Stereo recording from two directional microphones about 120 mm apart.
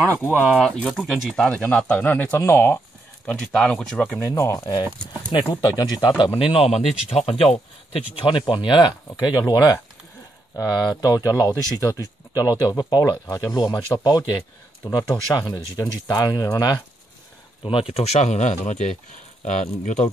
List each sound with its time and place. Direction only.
0.6 s speech: 5° left (ahead or behind)
1.3 s speech: 10° left (ahead or behind)
3.3 s speech: 10° left (ahead or behind)
4.2 s speech: 25° left (ahead or behind)
11.0 s speech: 30° left (ahead or behind)
17.6 s speech: 50° left (ahead or behind); by 20.1 s 90° left